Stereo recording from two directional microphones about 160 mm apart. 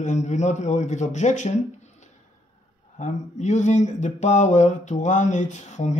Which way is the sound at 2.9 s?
45° left (ahead or behind).